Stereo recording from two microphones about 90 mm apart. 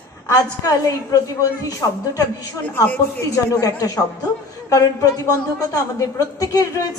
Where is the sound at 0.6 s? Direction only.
40° left (ahead or behind).